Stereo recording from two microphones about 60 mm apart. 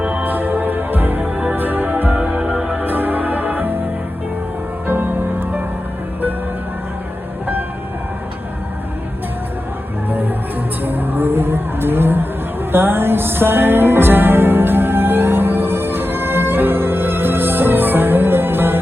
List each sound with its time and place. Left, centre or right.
0.0 s music: right
2.7 s music: right
4.9 s music: right
10.1 s music: right